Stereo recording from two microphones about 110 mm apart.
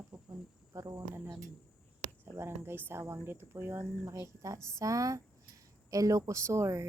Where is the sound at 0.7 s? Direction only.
30° right (ahead or behind).